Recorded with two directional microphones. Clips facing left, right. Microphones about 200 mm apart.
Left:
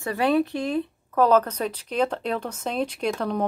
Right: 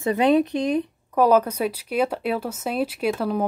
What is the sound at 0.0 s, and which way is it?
A woman's voice, 20° right (ahead or behind).